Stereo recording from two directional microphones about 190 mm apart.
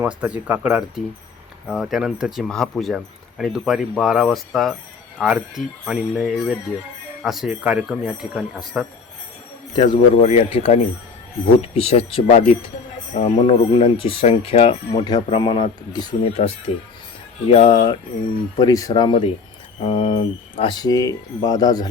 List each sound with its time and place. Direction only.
0.0 s speech: 5° right (ahead or behind)
9.7 s speech: 25° left (ahead or behind)
15.0 s speech: 25° left (ahead or behind)